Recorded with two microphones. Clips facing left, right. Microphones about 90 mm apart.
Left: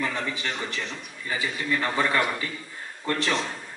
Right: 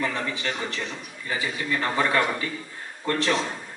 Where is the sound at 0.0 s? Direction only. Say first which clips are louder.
Right 1 dB; 15° right (ahead or behind).